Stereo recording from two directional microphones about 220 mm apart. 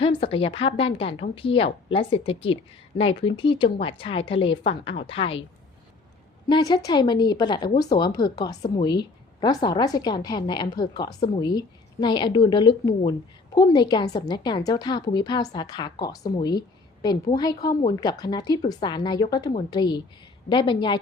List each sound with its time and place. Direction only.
0.0 s a woman's voice: 25° left (ahead or behind)
6.5 s a woman's voice: 20° left (ahead or behind)